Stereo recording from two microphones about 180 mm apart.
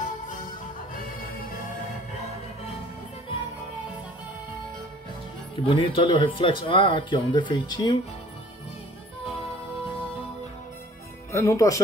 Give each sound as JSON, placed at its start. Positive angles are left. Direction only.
{"t": 0.0, "sound": "music", "side_deg": 45}
{"t": 5.7, "sound": "speech", "side_deg": 30}
{"t": 11.3, "sound": "speech", "side_deg": 15}